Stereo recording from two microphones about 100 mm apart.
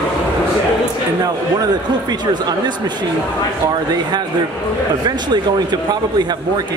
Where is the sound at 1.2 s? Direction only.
40° right (ahead or behind).